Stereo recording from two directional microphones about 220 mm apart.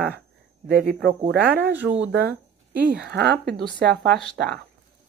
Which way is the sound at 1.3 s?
50° right (ahead or behind).